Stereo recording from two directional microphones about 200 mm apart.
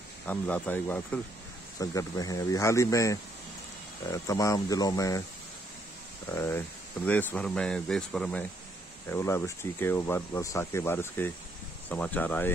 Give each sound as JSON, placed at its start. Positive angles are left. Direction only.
{"t": 0.3, "sound": "speech", "side_deg": 10}
{"t": 6.2, "sound": "speech", "side_deg": 15}